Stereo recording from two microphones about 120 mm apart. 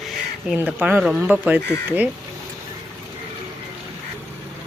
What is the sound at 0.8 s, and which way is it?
Speech, 10° right (ahead or behind).